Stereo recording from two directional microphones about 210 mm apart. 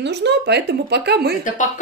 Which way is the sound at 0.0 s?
55° right (ahead or behind).